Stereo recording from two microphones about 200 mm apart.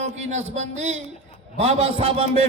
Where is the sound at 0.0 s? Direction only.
35° right (ahead or behind).